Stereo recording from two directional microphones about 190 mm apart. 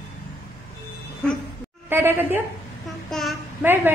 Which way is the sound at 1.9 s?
10° right (ahead or behind).